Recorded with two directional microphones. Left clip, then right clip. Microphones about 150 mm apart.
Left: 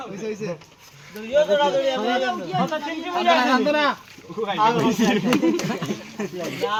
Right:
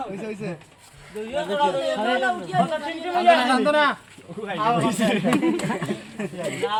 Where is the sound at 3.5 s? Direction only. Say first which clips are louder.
Even; 40° right (ahead or behind).